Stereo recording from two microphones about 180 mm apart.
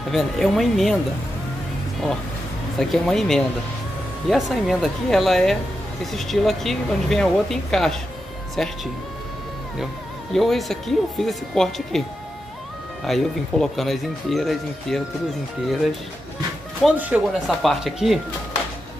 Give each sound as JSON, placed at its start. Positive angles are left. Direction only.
{"t": 0.1, "sound": "speech", "side_deg": 0}
{"t": 2.8, "sound": "speech", "side_deg": 0}
{"t": 10.3, "sound": "speech", "side_deg": 0}
{"t": 13.0, "sound": "speech", "side_deg": 0}
{"t": 16.8, "sound": "speech", "side_deg": -5}